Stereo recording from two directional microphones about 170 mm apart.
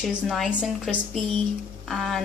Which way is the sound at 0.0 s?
Centre (ahead or behind).